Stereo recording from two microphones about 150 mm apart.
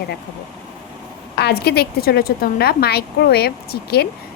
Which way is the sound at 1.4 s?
90° left.